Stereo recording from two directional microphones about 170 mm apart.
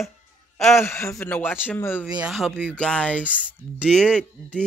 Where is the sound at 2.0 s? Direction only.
5° right (ahead or behind).